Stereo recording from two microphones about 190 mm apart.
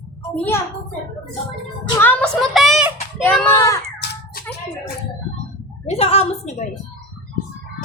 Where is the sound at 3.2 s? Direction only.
10° left (ahead or behind).